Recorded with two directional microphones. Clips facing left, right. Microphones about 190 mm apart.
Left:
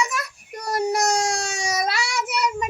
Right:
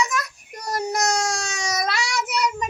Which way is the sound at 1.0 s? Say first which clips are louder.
Left 1 dB; 30° left (ahead or behind).